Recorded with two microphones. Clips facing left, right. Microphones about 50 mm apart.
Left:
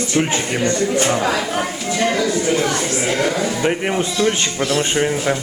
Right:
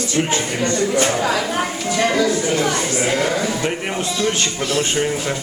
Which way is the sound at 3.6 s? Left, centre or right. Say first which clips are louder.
Left 4 dB; centre.